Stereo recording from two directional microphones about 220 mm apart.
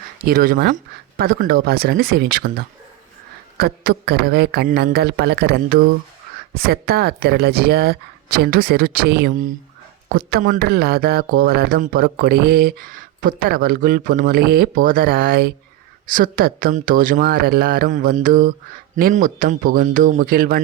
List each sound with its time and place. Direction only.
0.3 s speech: 40° right (ahead or behind)